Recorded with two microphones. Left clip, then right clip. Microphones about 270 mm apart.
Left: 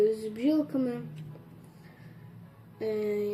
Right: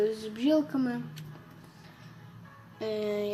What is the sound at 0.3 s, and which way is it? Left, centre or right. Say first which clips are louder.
Speech: right 1 dB; centre.